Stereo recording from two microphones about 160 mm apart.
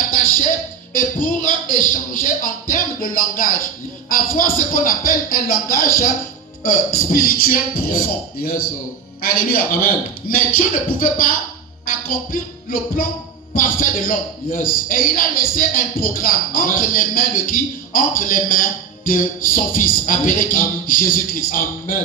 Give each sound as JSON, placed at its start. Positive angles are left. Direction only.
{"t": 0.9, "sound": "a man's voice", "side_deg": 60}